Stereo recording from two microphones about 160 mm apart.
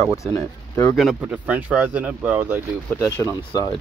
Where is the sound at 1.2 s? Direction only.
10° right (ahead or behind).